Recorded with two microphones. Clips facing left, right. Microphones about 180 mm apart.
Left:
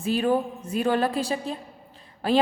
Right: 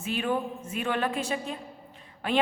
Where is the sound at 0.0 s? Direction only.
35° left (ahead or behind).